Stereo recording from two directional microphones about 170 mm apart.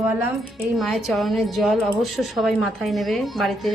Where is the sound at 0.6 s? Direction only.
Centre (ahead or behind).